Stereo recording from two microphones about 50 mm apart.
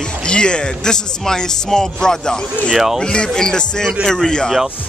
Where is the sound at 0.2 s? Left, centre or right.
Centre.